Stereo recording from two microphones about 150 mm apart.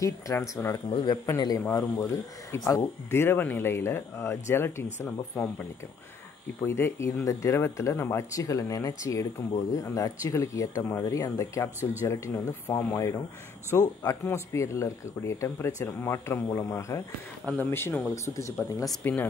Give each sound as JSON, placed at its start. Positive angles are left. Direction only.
{"t": 0.0, "sound": "speech", "side_deg": 20}
{"t": 0.8, "sound": "speech", "side_deg": 30}